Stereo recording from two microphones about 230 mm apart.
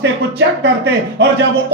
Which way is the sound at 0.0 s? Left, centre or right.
Right.